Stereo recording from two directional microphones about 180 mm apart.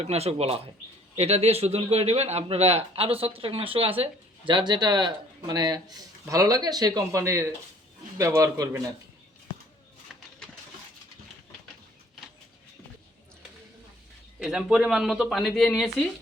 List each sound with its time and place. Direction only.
0.0 s a man's voice: 35° right (ahead or behind); by 8.8 s 20° right (ahead or behind)
10.1 s a sound: centre (ahead or behind)
14.3 s speech: 5° right (ahead or behind)